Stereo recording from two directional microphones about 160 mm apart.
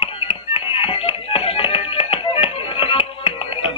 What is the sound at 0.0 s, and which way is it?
Music, 35° left (ahead or behind).